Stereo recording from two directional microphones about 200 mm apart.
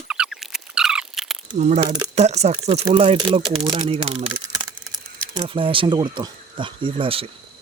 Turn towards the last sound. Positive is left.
turn(degrees=-25)  # may be behind; listen again after turning